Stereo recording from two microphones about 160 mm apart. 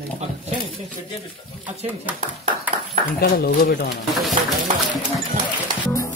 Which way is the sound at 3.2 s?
75° left (ahead or behind).